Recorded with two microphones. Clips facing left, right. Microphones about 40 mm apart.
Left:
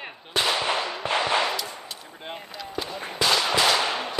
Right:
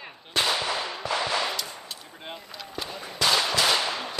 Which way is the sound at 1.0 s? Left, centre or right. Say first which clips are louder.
Left 4 dB; left.